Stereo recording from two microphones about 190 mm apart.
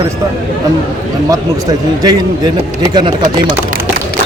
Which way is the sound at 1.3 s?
20° right (ahead or behind).